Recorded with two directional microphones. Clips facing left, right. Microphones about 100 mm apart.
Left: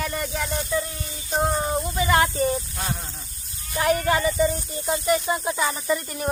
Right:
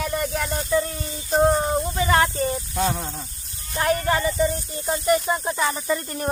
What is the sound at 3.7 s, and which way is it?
Speech, 35° right (ahead or behind).